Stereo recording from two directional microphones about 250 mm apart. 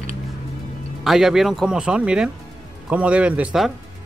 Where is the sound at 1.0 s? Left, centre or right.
Centre.